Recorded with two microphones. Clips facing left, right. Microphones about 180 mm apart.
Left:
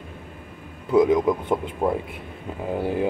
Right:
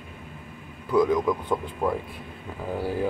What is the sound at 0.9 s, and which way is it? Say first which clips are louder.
Speech: left 4 dB; 20° left (ahead or behind).